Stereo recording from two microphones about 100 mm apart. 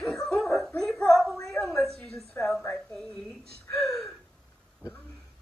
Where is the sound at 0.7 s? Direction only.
5° left (ahead or behind).